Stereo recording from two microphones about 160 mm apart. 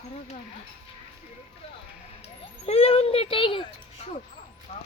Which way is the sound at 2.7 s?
40° left (ahead or behind).